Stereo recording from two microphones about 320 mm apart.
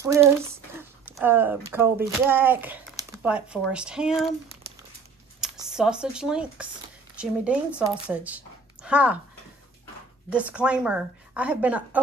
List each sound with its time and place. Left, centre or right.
0.0 s speech: centre
5.4 s a woman's voice: centre
10.3 s a woman's voice: centre